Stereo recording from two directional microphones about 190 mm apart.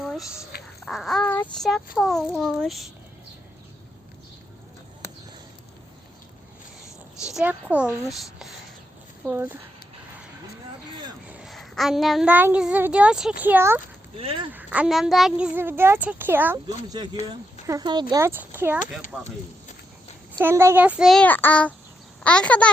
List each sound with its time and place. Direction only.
0.0 s a sound: centre (ahead or behind)
0.5 s a sound: 55° left (ahead or behind)
0.9 s child singing: centre (ahead or behind)
7.3 s a woman's voice: 5° right (ahead or behind)
9.2 s a woman's voice: 10° right (ahead or behind)
11.3 s a woman's voice: 5° right (ahead or behind)
14.2 s speech: 30° right (ahead or behind)
14.5 s a woman's voice: 5° right (ahead or behind)
17.0 s a woman's voice: 20° right (ahead or behind)
20.4 s child singing: 15° right (ahead or behind); by 21.7 s 10° left (ahead or behind)
22.2 s a child's voice: 5° left (ahead or behind)